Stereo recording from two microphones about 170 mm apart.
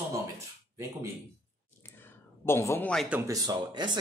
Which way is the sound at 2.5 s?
15° left (ahead or behind).